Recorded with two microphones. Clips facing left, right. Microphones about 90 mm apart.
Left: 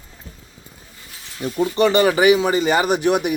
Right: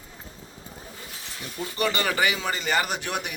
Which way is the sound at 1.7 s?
25° left (ahead or behind).